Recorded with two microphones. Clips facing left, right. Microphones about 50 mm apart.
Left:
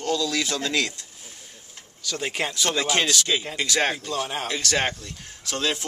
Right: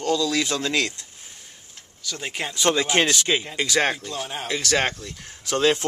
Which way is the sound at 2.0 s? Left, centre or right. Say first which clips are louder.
Left 3 dB; centre.